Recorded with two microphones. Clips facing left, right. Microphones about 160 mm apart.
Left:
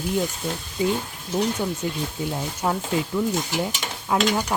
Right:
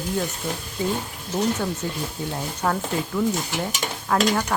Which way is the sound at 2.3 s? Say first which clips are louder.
Right 1 dB; 10° left (ahead or behind).